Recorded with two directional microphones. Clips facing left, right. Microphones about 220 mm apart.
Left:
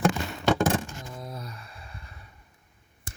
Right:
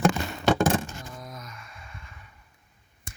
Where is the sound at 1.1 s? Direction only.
30° left (ahead or behind).